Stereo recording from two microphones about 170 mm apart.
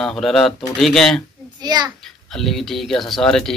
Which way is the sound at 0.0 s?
Centre (ahead or behind).